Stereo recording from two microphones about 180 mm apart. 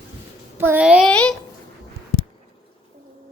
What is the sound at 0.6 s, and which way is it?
Speech, 10° right (ahead or behind).